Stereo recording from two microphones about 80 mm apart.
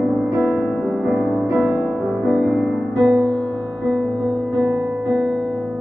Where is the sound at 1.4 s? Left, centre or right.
Centre.